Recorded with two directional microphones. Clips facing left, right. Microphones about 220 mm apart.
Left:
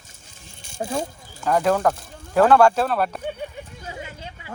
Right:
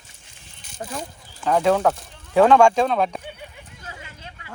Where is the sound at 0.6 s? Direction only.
25° left (ahead or behind).